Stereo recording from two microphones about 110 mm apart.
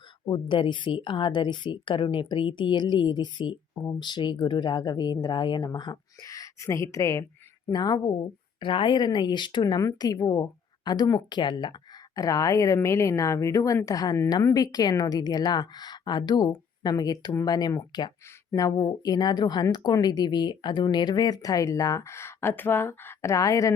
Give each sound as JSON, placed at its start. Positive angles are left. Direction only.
{"t": 0.3, "sound": "a woman's voice", "side_deg": 45}
{"t": 8.6, "sound": "speech", "side_deg": 50}